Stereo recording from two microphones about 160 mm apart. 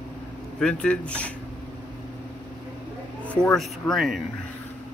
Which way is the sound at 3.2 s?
5° left (ahead or behind).